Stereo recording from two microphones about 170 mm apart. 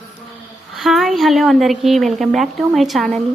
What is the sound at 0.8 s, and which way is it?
A woman's voice, centre (ahead or behind).